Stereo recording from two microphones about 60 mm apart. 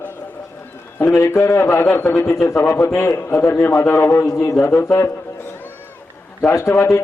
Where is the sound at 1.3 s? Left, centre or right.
Left.